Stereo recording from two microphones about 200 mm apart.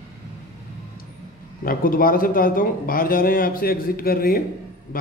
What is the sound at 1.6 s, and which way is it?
A man's voice, 45° left (ahead or behind).